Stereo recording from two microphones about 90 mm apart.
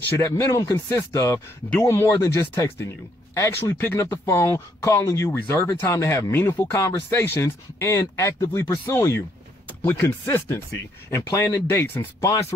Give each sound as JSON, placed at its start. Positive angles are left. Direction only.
{"t": 0.2, "sound": "speech", "side_deg": 35}